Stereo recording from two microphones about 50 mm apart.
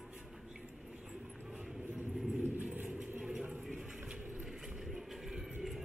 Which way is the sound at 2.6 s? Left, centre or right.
Right.